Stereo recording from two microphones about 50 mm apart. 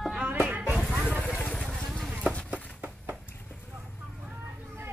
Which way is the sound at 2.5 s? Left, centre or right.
Right.